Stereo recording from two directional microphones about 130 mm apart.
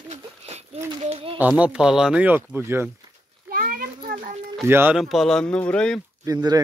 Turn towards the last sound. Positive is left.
turn(degrees=-30)  # may be behind; listen again after turning